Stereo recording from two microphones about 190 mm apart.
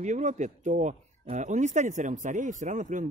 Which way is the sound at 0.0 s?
40° right (ahead or behind).